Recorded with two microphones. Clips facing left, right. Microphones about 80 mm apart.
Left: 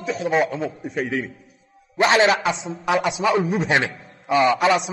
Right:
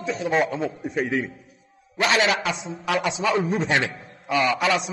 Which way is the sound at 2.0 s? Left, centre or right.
Left.